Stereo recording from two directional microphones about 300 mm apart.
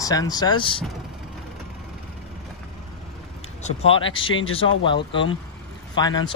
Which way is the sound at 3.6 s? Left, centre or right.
Centre.